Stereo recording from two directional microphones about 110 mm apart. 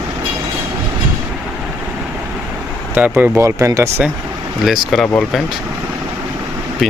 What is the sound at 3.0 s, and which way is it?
Speech, 15° right (ahead or behind).